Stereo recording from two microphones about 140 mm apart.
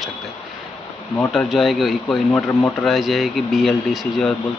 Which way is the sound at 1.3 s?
Centre (ahead or behind).